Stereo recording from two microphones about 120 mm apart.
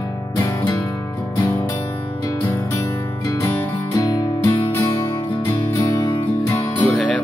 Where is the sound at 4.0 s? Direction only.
30° left (ahead or behind).